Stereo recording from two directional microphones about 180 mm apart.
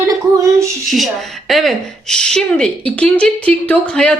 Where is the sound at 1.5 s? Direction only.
Centre (ahead or behind).